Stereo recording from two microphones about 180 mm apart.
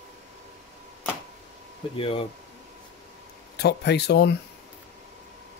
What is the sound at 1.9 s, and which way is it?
Speech, 30° left (ahead or behind).